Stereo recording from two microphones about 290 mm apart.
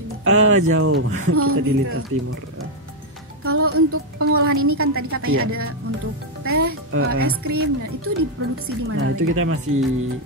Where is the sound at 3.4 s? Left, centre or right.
Right.